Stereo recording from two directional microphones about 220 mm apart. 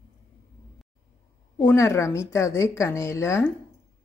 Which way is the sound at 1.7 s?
15° left (ahead or behind).